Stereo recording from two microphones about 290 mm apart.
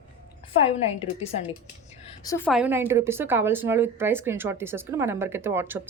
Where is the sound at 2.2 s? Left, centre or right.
Centre.